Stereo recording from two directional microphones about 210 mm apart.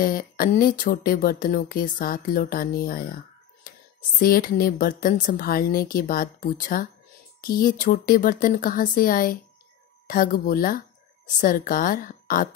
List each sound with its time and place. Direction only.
0.0 s speech: 40° left (ahead or behind)
4.2 s a woman's voice: 40° left (ahead or behind)